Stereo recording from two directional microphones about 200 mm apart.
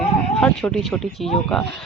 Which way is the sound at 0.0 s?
5° left (ahead or behind).